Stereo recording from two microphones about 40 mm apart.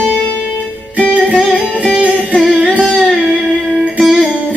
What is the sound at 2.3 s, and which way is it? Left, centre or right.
Music, centre.